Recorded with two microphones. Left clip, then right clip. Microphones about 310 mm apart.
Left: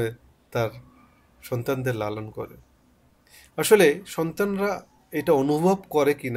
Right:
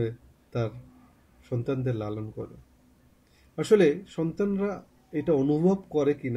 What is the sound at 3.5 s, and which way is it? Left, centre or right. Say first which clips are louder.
Speech: left 4 dB; left.